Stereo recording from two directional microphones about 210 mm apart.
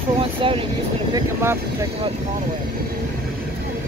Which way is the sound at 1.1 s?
10° right (ahead or behind).